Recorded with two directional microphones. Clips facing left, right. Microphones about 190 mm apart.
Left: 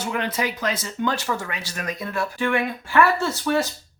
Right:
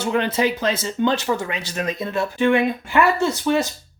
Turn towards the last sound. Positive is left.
turn(degrees=-20)  # may be behind; listen again after turning